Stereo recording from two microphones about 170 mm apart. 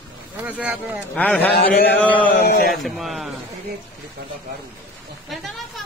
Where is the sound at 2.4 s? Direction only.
60° left (ahead or behind).